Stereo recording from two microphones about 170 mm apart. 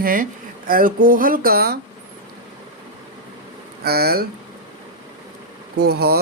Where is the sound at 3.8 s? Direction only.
65° right (ahead or behind).